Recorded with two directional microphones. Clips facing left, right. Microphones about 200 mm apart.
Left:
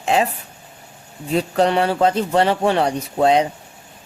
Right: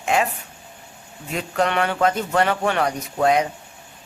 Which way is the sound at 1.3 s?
35° left (ahead or behind).